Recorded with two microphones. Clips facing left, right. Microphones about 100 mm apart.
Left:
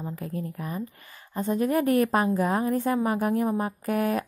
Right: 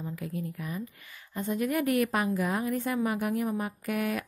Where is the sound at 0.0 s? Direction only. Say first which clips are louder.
Left 2 dB; 40° left (ahead or behind).